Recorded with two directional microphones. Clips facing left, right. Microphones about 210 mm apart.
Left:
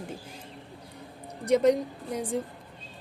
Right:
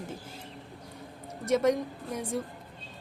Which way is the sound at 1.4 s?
15° left (ahead or behind).